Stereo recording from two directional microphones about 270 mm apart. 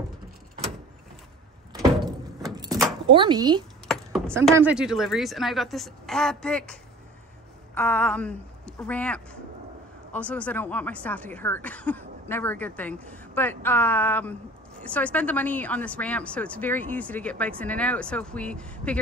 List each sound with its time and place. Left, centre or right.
1.7 s door: centre
3.1 s speech: centre
3.8 s a sound: centre
4.5 s speech: centre
7.7 s speech: centre